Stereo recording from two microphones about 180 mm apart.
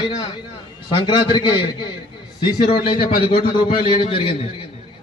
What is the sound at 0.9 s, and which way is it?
A man's voice, 25° left (ahead or behind).